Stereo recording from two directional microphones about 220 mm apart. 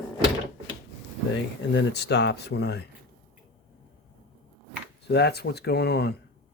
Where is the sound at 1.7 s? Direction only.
50° left (ahead or behind).